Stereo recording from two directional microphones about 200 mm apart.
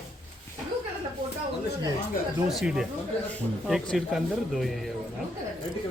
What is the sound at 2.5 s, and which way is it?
Speech, centre (ahead or behind).